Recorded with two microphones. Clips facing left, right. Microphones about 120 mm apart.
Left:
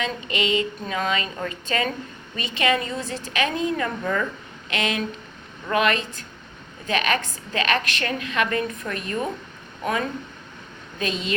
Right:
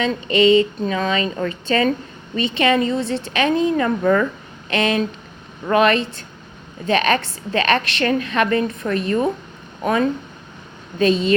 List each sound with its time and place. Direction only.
0.0 s a woman's voice: 35° right (ahead or behind)
4.0 s speech: 50° right (ahead or behind)
4.7 s a woman's voice: 35° right (ahead or behind)
11.0 s a woman's voice: 35° right (ahead or behind)